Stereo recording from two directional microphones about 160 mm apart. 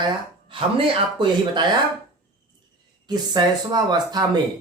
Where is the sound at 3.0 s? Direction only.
25° right (ahead or behind).